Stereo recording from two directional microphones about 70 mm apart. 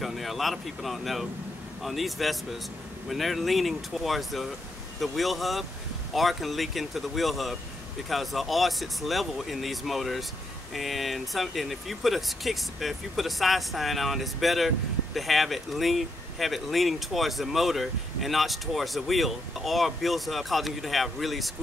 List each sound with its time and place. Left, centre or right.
0.0 s speech: centre